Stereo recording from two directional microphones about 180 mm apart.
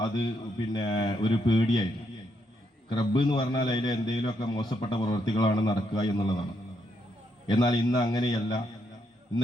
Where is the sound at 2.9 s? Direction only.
25° left (ahead or behind).